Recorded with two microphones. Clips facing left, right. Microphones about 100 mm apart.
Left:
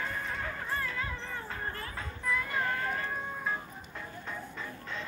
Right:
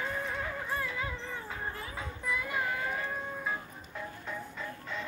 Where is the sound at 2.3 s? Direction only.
10° right (ahead or behind).